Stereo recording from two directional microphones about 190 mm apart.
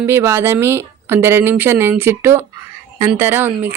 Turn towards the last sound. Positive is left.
turn(degrees=-10)  # may be behind; listen again after turning